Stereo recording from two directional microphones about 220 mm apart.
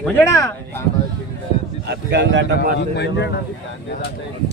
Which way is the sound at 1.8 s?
50° right (ahead or behind).